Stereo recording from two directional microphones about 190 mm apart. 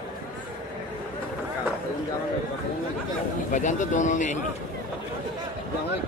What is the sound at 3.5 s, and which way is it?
Speech, 40° left (ahead or behind).